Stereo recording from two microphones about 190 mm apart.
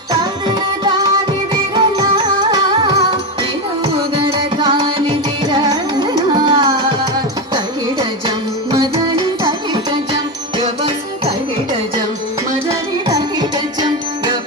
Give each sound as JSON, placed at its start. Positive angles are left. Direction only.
{"t": 0.1, "sound": "music", "side_deg": -25}
{"t": 4.3, "sound": "carnatic music", "side_deg": -30}
{"t": 9.2, "sound": "music", "side_deg": -25}
{"t": 13.1, "sound": "music", "side_deg": -20}